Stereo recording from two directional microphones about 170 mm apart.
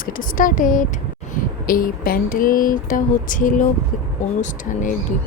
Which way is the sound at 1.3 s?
55° left (ahead or behind).